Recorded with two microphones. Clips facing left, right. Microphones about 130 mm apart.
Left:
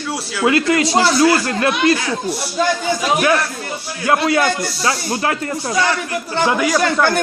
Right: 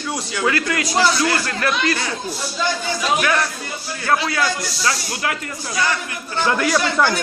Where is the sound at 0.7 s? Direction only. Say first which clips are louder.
Left 4 dB; 25° left (ahead or behind).